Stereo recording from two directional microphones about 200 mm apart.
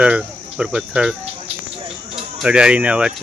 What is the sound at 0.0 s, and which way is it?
Speech, 5° right (ahead or behind).